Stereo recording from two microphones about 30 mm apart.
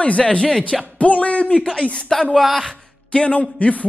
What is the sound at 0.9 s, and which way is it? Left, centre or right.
Music, left.